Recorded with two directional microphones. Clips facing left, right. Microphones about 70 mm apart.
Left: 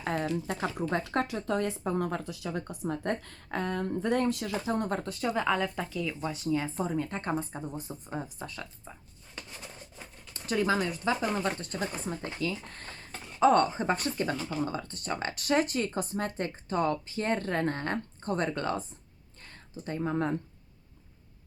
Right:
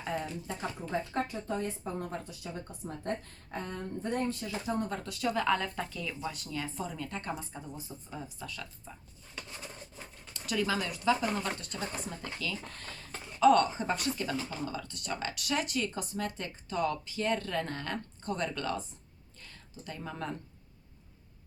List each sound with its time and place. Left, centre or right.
0.0 s speech: left
4.7 s speech: left
5.0 s speech: left
5.5 s speech: centre
6.3 s speech: left
6.7 s speech: left
10.3 s speech: left